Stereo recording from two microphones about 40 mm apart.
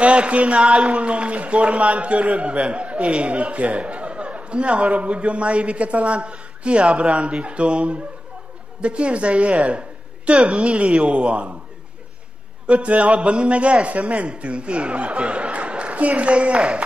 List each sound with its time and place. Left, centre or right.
0.0 s a man's voice: right
12.6 s a man's voice: right